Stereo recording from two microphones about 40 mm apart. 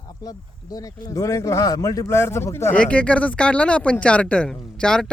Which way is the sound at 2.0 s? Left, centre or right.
Left.